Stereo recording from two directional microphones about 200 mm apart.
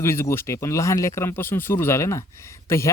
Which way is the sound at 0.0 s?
15° left (ahead or behind).